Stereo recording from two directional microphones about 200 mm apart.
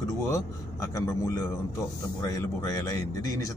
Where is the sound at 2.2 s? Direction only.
20° left (ahead or behind).